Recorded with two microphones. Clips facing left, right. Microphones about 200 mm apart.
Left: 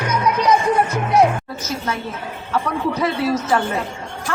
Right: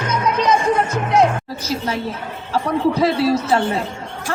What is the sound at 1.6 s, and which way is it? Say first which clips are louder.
A woman's voice: right 5 dB; 35° right (ahead or behind).